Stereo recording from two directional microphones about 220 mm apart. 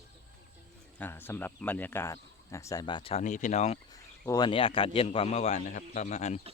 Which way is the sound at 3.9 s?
15° left (ahead or behind).